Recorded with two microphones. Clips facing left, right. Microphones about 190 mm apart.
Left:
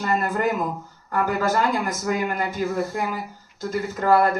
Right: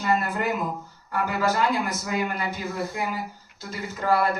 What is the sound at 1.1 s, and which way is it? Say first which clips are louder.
A man's voice: left 3 dB; 50° left (ahead or behind).